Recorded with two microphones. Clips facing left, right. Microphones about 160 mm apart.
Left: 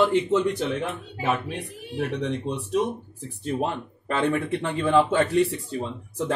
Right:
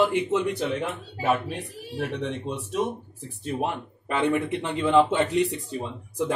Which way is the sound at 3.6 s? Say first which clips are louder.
Left 1 dB; 15° right (ahead or behind).